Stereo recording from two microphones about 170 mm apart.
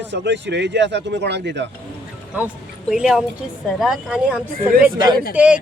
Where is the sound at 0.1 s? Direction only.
90° right.